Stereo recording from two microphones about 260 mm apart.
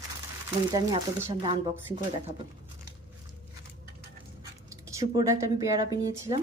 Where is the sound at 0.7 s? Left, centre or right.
Centre.